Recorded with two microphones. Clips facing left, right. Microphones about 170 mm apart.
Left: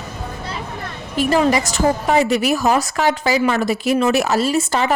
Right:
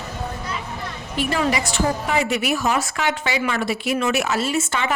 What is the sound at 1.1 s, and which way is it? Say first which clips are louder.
A woman's voice: left 6 dB; 40° left (ahead or behind).